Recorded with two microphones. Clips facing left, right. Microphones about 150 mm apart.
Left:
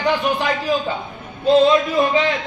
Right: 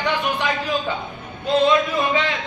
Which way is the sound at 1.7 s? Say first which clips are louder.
Left 3 dB; 20° left (ahead or behind).